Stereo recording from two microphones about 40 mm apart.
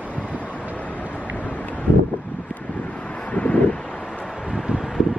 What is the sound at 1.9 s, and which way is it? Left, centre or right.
Wind, left.